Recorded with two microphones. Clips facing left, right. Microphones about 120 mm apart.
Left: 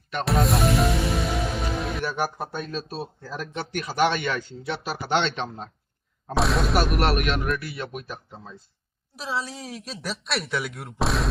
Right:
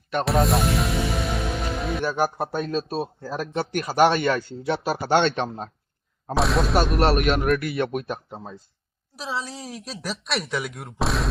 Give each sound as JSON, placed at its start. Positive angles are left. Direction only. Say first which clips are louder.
{"t": 0.3, "sound": "music", "louder": "even", "side_deg": 0}
{"t": 2.4, "sound": "speech", "louder": "right 6 dB", "side_deg": -40}
{"t": 6.3, "sound": "speech", "louder": "right 2 dB", "side_deg": 0}
{"t": 7.2, "sound": "speech", "louder": "right 4 dB", "side_deg": -45}
{"t": 7.4, "sound": "speech", "louder": "right 7 dB", "side_deg": -60}
{"t": 9.1, "sound": "speech", "louder": "even", "side_deg": 0}